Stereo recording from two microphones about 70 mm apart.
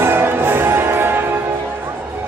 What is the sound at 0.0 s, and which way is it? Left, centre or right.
Music, right.